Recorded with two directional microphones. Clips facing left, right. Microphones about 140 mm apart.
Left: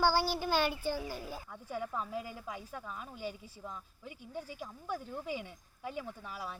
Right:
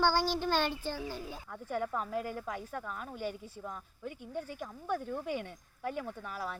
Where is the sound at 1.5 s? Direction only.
55° right (ahead or behind).